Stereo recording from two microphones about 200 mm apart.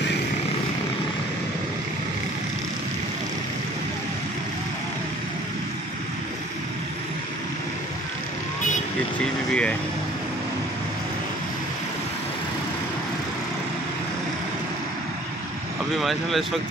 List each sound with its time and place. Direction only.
9.5 s speech: 5° left (ahead or behind)
16.0 s speech: centre (ahead or behind)